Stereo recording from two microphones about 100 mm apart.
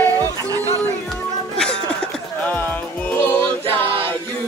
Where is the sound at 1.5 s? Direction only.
10° left (ahead or behind).